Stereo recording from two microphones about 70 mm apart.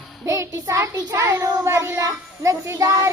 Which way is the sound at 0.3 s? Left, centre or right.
Right.